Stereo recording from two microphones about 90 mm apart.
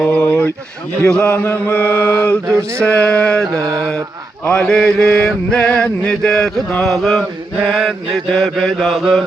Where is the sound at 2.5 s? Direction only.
30° right (ahead or behind).